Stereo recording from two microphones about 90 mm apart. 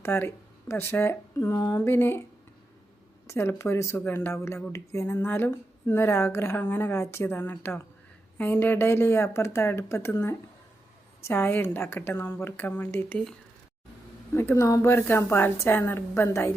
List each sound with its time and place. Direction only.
0.0 s speech: 25° left (ahead or behind)
1.5 s a sound: 45° left (ahead or behind)
1.8 s a woman's voice: 25° left (ahead or behind)
3.2 s a woman's voice: 30° left (ahead or behind)
14.3 s a woman's voice: 30° left (ahead or behind)